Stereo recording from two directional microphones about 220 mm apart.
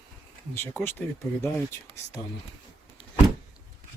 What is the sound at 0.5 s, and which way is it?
Speech, 10° left (ahead or behind).